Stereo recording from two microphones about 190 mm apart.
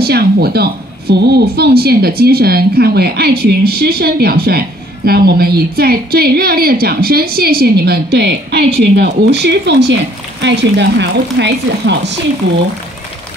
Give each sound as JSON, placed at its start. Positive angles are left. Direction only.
{"t": 0.0, "sound": "speech", "side_deg": -55}